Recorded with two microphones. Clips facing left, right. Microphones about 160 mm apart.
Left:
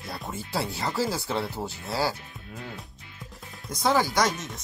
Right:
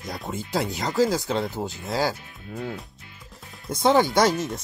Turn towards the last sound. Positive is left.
turn(degrees=-30)  # may be behind; listen again after turning